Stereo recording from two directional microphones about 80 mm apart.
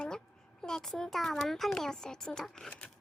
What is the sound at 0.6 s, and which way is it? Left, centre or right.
A child's voice, centre.